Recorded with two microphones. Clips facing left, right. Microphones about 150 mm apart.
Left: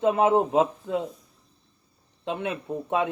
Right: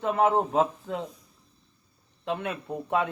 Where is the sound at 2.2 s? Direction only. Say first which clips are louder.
Left 1 dB; 20° left (ahead or behind).